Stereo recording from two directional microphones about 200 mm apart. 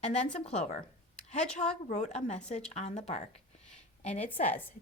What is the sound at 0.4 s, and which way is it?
Speech, 35° left (ahead or behind).